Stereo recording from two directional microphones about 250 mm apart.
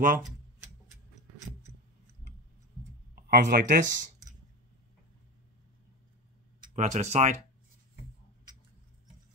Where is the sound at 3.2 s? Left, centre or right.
Right.